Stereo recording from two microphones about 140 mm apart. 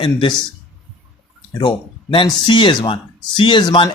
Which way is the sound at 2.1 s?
35° left (ahead or behind).